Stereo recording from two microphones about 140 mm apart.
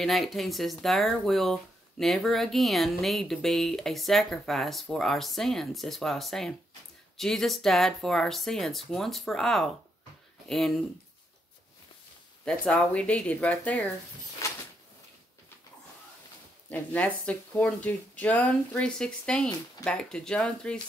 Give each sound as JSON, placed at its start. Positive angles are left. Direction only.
{"t": 0.0, "sound": "speech", "side_deg": 0}
{"t": 12.4, "sound": "speech", "side_deg": 5}
{"t": 14.4, "sound": "a sound", "side_deg": 20}
{"t": 16.6, "sound": "speech", "side_deg": 10}